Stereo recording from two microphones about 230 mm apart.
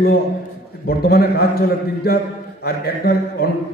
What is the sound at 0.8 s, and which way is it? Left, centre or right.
A man's voice, left.